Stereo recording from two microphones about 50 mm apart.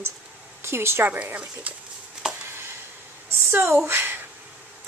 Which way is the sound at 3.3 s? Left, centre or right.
Right.